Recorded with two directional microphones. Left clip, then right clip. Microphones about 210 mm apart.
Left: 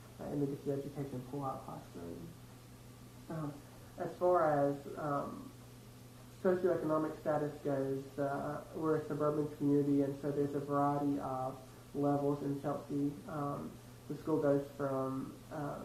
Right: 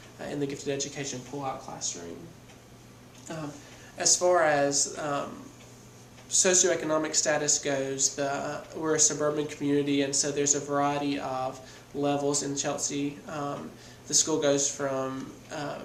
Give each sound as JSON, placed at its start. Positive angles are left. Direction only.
{"t": 0.2, "sound": "speech", "side_deg": -35}
{"t": 3.2, "sound": "speech", "side_deg": -35}
{"t": 6.5, "sound": "speech", "side_deg": -35}